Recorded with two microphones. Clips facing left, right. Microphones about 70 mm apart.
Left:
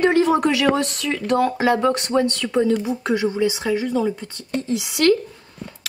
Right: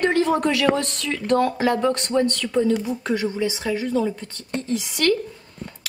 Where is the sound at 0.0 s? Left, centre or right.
Centre.